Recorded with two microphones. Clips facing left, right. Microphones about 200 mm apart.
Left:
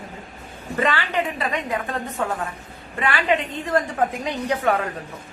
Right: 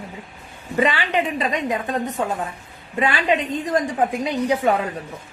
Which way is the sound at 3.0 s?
20° right (ahead or behind).